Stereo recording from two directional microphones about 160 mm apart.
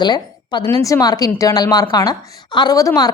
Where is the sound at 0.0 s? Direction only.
25° left (ahead or behind).